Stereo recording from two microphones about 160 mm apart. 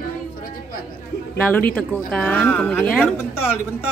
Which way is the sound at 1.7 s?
10° left (ahead or behind).